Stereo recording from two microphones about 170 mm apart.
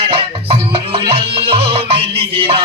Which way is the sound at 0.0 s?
35° right (ahead or behind).